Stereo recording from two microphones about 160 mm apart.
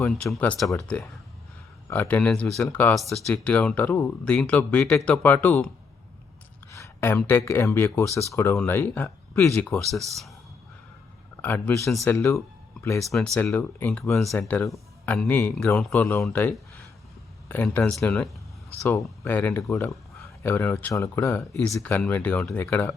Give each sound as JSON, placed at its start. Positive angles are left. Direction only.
{"t": 0.1, "sound": "speech", "side_deg": 5}
{"t": 9.6, "sound": "speech", "side_deg": 0}
{"t": 11.4, "sound": "speech", "side_deg": 10}
{"t": 13.0, "sound": "speech", "side_deg": 0}
{"t": 13.3, "sound": "speech", "side_deg": 10}
{"t": 14.1, "sound": "speech", "side_deg": 0}